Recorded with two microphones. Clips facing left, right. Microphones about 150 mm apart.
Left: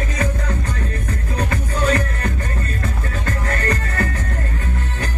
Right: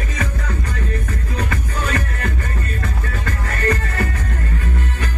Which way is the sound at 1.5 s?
30° left (ahead or behind).